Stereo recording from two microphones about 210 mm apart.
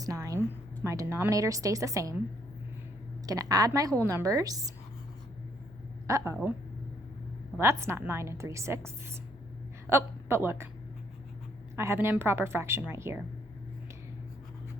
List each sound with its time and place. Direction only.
0.0 s a woman's voice: 15° right (ahead or behind)
3.2 s a woman's voice: 15° right (ahead or behind)
6.1 s a woman's voice: 15° right (ahead or behind)
7.6 s a woman's voice: 10° right (ahead or behind)
9.9 s a woman's voice: 10° right (ahead or behind)
11.8 s a woman's voice: 10° right (ahead or behind)